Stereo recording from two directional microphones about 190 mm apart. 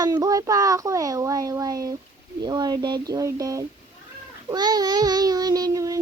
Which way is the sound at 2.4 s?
20° right (ahead or behind).